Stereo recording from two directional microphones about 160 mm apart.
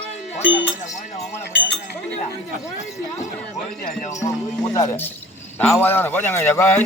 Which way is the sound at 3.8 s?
55° left (ahead or behind).